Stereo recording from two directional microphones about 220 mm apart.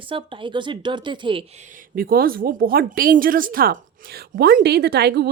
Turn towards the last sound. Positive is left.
turn(degrees=-50)  # may be behind; listen again after turning